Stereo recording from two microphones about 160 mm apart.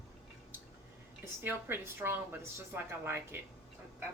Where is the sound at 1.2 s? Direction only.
15° right (ahead or behind).